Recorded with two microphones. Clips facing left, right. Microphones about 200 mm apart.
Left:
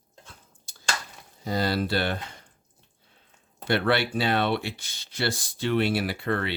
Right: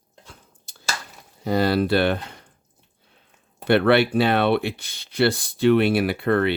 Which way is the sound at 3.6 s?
60° right (ahead or behind).